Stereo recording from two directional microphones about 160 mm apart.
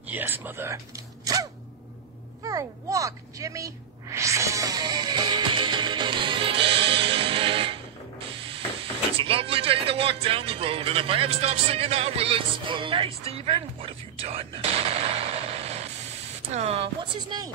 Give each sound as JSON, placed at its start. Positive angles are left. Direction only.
{"t": 0.1, "sound": "speech", "side_deg": -10}
{"t": 2.4, "sound": "a sound", "side_deg": -20}
{"t": 9.2, "sound": "speech", "side_deg": -35}